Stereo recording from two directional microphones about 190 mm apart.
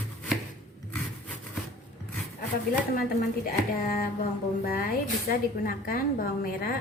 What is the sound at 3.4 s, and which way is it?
Speech, 50° left (ahead or behind).